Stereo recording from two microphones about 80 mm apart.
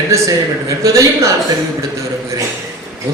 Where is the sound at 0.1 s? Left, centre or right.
Right.